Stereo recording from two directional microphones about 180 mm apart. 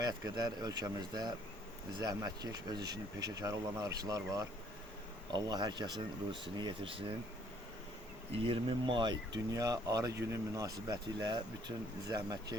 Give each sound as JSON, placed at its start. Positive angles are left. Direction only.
{"t": 0.0, "sound": "speech", "side_deg": -20}
{"t": 8.4, "sound": "speech", "side_deg": -30}